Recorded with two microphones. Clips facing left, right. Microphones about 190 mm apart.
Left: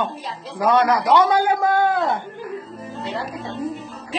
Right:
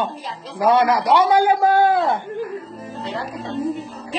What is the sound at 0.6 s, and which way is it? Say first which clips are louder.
Speech: right 1 dB; 20° right (ahead or behind).